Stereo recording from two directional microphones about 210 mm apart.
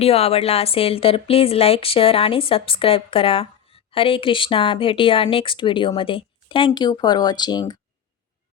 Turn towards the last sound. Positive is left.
turn(degrees=20)  # may be behind; listen again after turning